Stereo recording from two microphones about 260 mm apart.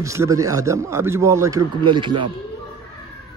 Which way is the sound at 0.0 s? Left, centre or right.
Centre.